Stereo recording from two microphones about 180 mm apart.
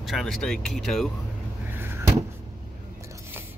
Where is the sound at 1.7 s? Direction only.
10° right (ahead or behind).